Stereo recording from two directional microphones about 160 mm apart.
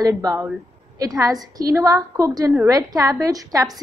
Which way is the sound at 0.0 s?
20° right (ahead or behind).